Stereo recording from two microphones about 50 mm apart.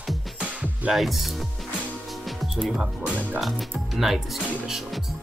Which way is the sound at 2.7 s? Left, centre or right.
Right.